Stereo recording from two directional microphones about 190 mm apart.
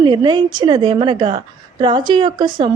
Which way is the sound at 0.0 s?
25° right (ahead or behind).